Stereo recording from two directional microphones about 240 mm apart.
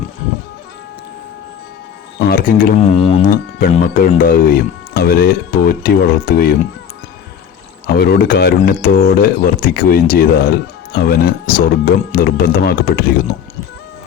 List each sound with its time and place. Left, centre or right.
2.1 s a man's voice: left
7.9 s a man's voice: left